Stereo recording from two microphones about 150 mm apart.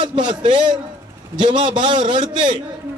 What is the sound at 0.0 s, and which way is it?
A man's voice, 30° right (ahead or behind).